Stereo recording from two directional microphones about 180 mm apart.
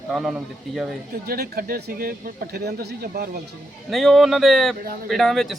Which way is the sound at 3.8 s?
Centre (ahead or behind).